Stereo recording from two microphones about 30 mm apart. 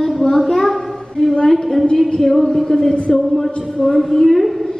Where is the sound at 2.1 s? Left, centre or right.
Centre.